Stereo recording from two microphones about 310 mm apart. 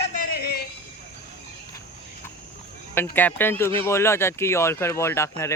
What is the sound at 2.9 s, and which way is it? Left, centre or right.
Speech, centre.